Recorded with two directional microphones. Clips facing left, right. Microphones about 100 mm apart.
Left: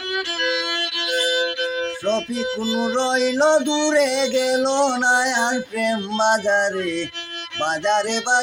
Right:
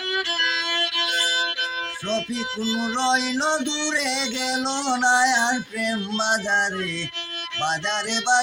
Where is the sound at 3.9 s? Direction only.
50° left (ahead or behind).